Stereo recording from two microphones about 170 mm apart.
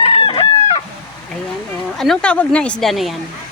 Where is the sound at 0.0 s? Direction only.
35° left (ahead or behind).